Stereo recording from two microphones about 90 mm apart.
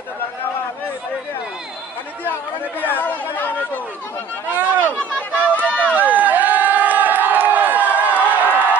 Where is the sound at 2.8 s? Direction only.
20° left (ahead or behind).